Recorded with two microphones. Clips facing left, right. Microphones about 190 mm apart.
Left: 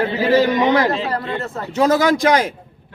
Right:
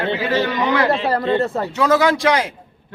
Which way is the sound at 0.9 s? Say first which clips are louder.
Right 4 dB; 30° right (ahead or behind).